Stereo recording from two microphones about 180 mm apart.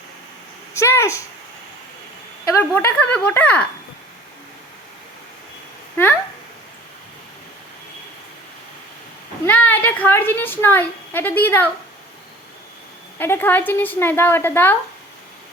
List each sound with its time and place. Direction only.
0.7 s a woman's voice: 15° left (ahead or behind)
2.4 s a woman's voice: 15° left (ahead or behind)
9.5 s a woman's voice: 10° left (ahead or behind)
13.1 s a woman's voice: 10° left (ahead or behind)